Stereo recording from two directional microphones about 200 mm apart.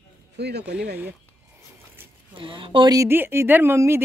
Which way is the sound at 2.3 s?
25° right (ahead or behind).